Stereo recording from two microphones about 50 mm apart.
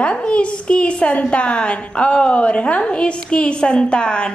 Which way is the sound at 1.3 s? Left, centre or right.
Left.